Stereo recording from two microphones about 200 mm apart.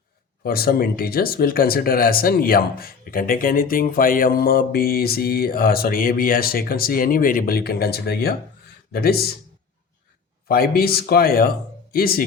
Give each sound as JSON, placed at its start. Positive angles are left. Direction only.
{"t": 0.4, "sound": "speech", "side_deg": 50}
{"t": 10.5, "sound": "speech", "side_deg": 50}